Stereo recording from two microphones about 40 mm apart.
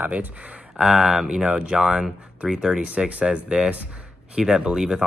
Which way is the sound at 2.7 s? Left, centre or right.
Right.